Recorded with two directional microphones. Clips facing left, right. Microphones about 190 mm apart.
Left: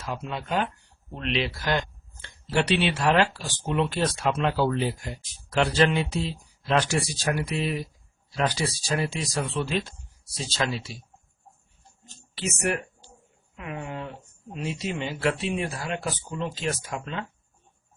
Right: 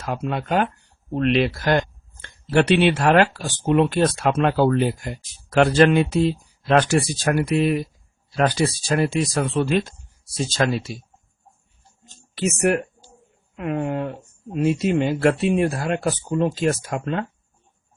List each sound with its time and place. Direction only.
0.0 s speech: 55° right (ahead or behind)
12.3 s speech: 55° right (ahead or behind)